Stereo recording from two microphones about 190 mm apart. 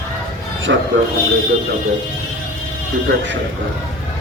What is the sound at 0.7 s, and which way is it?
Speech, 65° right (ahead or behind).